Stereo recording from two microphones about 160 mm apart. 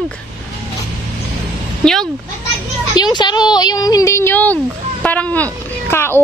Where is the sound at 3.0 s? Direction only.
25° left (ahead or behind).